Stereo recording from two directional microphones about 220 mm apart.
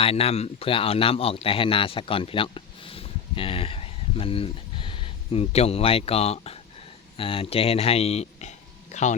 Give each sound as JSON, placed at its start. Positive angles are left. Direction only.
{"t": 0.0, "sound": "a man's voice", "side_deg": 25}